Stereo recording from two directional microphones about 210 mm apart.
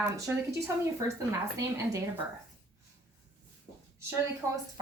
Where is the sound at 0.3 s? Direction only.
10° right (ahead or behind).